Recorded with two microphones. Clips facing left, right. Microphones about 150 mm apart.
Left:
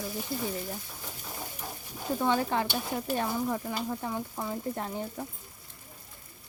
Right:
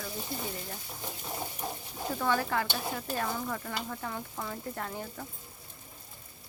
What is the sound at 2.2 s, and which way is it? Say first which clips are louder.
Stir: left 2 dB; 20° left (ahead or behind).